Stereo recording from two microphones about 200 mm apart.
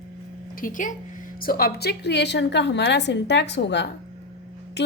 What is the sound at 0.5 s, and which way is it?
A woman's voice, 45° left (ahead or behind).